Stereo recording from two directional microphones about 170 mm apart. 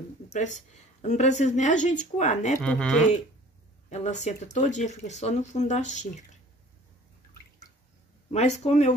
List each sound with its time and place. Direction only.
0.3 s speech: 45° left (ahead or behind)
2.6 s speech: 5° left (ahead or behind)
3.9 s speech: 40° left (ahead or behind)
8.3 s speech: 40° left (ahead or behind)